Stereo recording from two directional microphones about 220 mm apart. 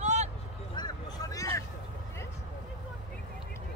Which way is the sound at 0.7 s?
20° left (ahead or behind).